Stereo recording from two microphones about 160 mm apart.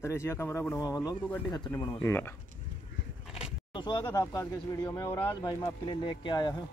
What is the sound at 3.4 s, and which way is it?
Speech, 30° left (ahead or behind).